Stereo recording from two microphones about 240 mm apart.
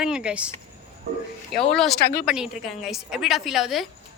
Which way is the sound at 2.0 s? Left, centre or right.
Left.